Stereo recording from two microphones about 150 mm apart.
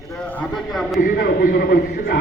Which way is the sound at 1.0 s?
85° left.